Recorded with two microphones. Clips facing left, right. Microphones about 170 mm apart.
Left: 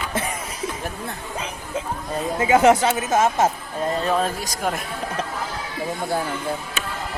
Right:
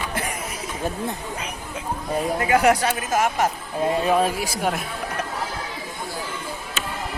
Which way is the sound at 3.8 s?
10° right (ahead or behind).